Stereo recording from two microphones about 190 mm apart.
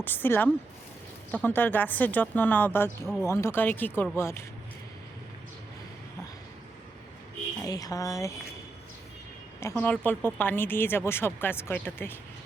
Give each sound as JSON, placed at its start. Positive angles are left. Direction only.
{"t": 0.0, "sound": "speech", "side_deg": 10}
{"t": 7.6, "sound": "speech", "side_deg": 20}
{"t": 9.6, "sound": "speech", "side_deg": 10}